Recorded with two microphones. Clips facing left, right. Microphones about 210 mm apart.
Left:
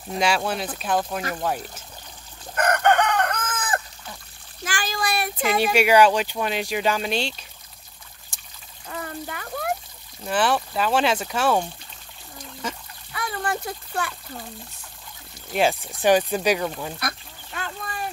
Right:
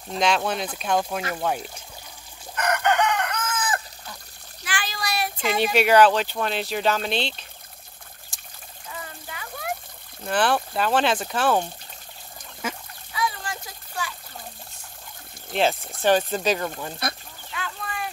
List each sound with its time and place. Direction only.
0.1 s speech: 10° left (ahead or behind)
2.5 s chicken: 50° left (ahead or behind)
4.6 s child singing: 45° left (ahead or behind)
5.8 s speech: 10° left (ahead or behind)
8.3 s trickle: 60° left (ahead or behind)
8.8 s water: 55° left (ahead or behind)
10.2 s speech: 5° left (ahead or behind)
13.1 s a sound: 55° left (ahead or behind)
15.5 s speech: 5° left (ahead or behind)
15.9 s speech: 15° left (ahead or behind)
17.5 s a sound: 45° left (ahead or behind)